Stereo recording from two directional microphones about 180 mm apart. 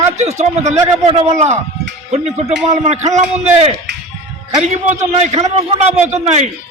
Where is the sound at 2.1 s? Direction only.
35° right (ahead or behind).